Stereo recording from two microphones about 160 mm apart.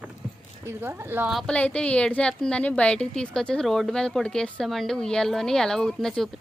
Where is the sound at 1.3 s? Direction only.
5° left (ahead or behind).